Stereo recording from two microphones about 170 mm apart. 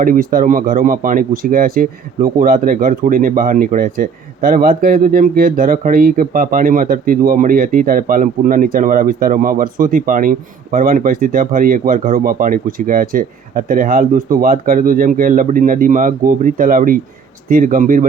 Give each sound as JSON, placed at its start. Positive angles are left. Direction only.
{"t": 0.0, "sound": "speech", "side_deg": -55}